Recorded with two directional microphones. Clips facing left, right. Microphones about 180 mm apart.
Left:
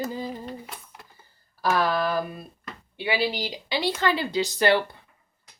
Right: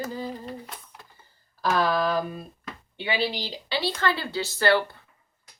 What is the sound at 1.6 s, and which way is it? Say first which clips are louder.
A woman's voice: even; 10° left (ahead or behind).